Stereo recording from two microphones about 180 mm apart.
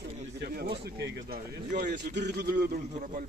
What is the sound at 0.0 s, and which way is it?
Speech, 60° right (ahead or behind).